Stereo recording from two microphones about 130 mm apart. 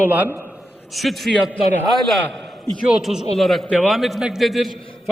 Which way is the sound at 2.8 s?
5° right (ahead or behind).